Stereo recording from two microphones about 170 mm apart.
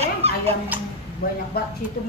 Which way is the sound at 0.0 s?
35° right (ahead or behind).